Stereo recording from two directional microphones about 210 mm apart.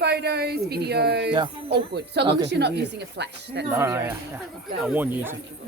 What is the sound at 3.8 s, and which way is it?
Speech, 10° right (ahead or behind).